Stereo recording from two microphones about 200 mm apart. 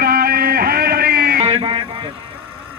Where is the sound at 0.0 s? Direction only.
50° right (ahead or behind).